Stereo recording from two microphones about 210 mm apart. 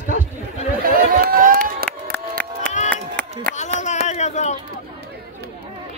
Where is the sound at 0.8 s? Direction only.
40° right (ahead or behind).